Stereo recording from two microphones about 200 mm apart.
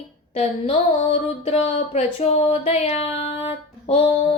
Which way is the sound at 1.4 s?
30° left (ahead or behind).